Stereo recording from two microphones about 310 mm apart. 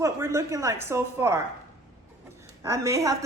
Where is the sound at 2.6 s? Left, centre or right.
Centre.